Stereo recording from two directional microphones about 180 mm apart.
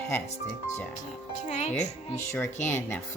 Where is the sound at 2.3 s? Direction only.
10° left (ahead or behind).